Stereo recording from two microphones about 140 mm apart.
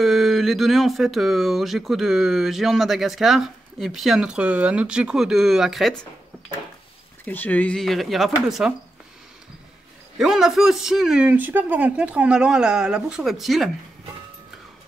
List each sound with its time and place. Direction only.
0.0 s speech: centre (ahead or behind)
7.2 s speech: 10° left (ahead or behind)
10.1 s speech: 5° right (ahead or behind)